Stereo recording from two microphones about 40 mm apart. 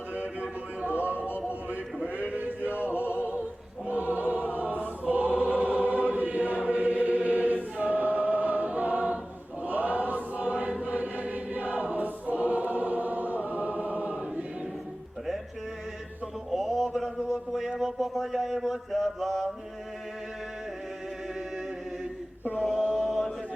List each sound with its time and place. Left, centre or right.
1.0 s music: right
2.4 s male singing: right
3.8 s choir: right
13.5 s choir: right
16.5 s mantra: centre
22.8 s chant: centre